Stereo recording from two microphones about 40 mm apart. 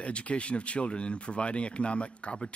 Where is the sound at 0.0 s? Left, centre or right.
Left.